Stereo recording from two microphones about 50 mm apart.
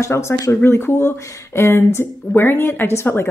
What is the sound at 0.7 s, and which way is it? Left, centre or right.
Speech, left.